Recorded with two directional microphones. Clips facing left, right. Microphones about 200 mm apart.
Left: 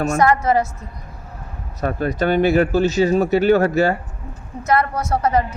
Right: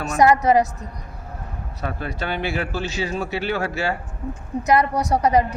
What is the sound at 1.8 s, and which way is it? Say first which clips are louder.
Speech: left 8 dB; 45° left (ahead or behind).